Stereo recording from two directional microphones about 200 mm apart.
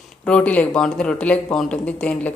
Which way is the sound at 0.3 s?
5° left (ahead or behind).